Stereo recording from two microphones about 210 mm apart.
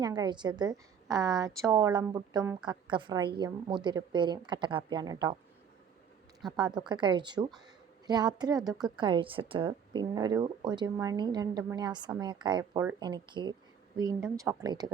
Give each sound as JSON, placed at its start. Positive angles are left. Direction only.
{"t": 0.0, "sound": "a woman's voice", "side_deg": -20}
{"t": 6.6, "sound": "a woman's voice", "side_deg": -20}